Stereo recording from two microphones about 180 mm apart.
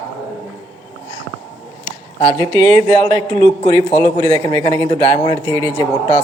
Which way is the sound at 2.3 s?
25° right (ahead or behind).